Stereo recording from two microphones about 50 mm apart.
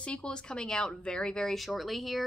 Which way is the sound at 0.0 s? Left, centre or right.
Left.